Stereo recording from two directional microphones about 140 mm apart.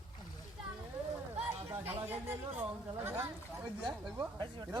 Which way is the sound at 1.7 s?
15° right (ahead or behind).